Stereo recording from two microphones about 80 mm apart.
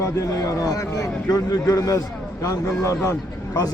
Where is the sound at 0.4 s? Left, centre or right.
Left.